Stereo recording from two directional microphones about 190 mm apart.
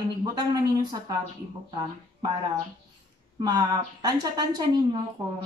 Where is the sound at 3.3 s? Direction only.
20° right (ahead or behind).